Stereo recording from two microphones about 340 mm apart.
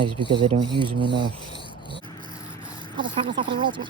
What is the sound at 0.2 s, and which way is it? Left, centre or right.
Speech, centre.